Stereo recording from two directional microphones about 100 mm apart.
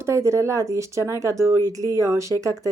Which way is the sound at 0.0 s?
30° right (ahead or behind).